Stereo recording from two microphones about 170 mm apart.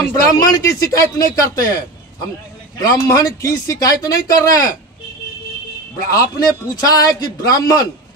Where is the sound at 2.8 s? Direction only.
20° left (ahead or behind).